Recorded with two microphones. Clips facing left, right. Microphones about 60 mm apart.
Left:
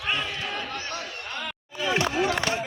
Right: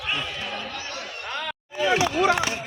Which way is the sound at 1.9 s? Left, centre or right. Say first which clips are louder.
Left 2 dB; left.